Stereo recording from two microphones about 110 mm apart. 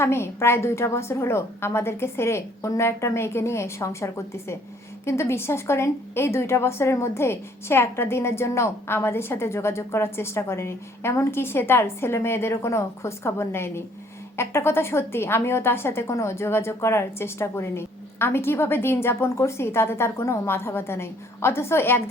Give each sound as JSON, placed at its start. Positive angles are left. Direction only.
{"t": 0.0, "sound": "a woman's voice", "side_deg": 20}